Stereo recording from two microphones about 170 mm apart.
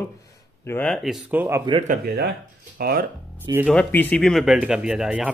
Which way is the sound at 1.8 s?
55° right (ahead or behind).